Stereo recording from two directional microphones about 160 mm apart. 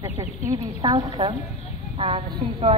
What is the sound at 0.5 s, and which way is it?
A woman's voice, 25° right (ahead or behind).